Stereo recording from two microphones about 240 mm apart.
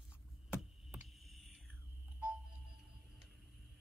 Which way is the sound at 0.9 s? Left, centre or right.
Centre.